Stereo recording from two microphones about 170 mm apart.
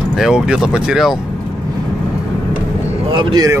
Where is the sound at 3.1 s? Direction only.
25° right (ahead or behind).